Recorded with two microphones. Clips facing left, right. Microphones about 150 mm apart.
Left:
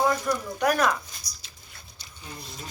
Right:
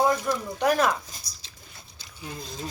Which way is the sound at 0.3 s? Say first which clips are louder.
Right 1 dB; 20° right (ahead or behind).